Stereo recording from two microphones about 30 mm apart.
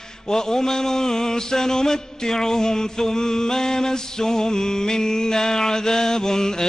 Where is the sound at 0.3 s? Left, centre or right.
Centre.